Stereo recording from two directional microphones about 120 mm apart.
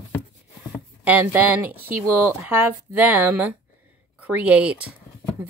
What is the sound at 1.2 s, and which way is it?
A woman's voice, 15° right (ahead or behind).